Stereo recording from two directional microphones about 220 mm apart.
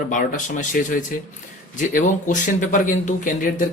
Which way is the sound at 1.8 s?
35° left (ahead or behind).